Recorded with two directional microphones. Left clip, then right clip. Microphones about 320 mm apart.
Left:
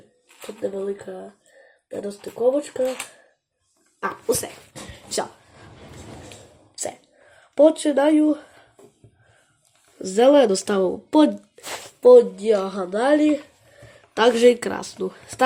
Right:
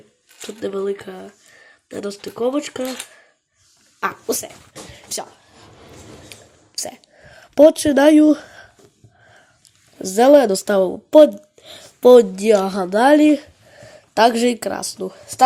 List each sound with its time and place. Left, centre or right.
0.6 s speech: right
4.0 s speech: centre
6.7 s speech: right
10.2 s speech: centre
11.9 s speech: right
14.1 s speech: centre